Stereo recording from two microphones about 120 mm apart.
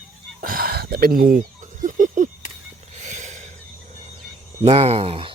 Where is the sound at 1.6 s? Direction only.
90° right.